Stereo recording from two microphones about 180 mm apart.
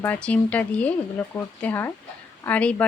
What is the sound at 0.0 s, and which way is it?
Speech, 10° left (ahead or behind).